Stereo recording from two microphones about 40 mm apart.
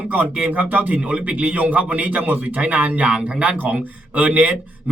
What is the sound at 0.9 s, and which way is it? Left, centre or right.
A man's voice, right.